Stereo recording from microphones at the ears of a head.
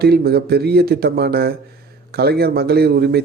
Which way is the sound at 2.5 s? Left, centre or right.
Right.